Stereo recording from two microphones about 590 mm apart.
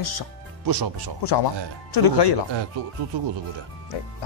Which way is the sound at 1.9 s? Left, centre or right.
Left.